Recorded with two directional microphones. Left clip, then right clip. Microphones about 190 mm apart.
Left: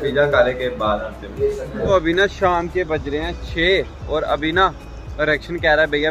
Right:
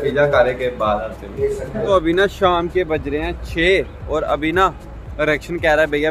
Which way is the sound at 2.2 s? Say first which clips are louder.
Right 1 dB; 15° right (ahead or behind).